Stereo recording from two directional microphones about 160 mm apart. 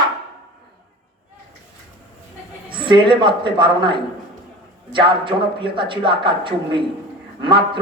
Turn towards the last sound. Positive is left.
turn(degrees=-30)  # may be behind; listen again after turning